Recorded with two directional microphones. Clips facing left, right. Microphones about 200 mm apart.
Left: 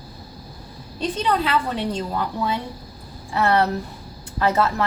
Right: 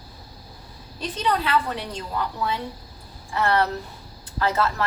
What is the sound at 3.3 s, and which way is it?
A woman's voice, 25° left (ahead or behind).